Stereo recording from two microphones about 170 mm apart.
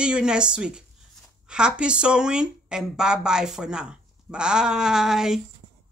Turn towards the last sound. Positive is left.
turn(degrees=-5)  # may be behind; listen again after turning